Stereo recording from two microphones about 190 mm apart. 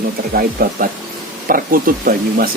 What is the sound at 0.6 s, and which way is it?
Speech, 50° right (ahead or behind).